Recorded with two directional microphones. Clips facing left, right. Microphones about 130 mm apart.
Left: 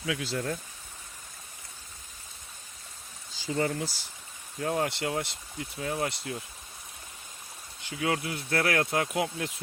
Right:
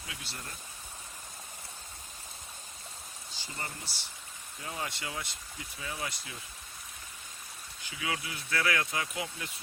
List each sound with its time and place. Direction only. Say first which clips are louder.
0.0 s speech: left 14 dB; 90° left
3.5 s speech: left 14 dB; 90° left
4.6 s speech: left 10 dB; 60° left (ahead or behind)
7.9 s speech: left 7 dB; 50° left (ahead or behind)